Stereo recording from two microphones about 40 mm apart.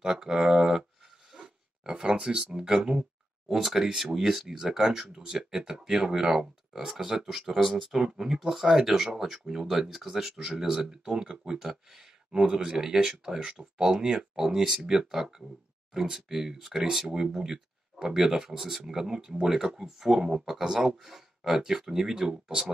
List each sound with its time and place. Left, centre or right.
0.0 s speech: centre
1.3 s a sound: centre
3.4 s speech: centre